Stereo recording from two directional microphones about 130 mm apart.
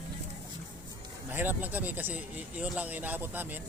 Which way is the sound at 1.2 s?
15° right (ahead or behind).